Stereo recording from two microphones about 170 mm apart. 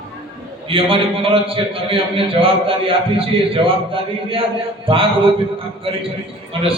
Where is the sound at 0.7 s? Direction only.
30° right (ahead or behind).